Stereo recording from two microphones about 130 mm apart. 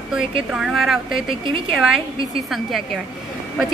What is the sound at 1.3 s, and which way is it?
Speech, 45° right (ahead or behind).